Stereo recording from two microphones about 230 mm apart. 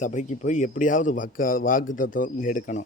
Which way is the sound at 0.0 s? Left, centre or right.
Left.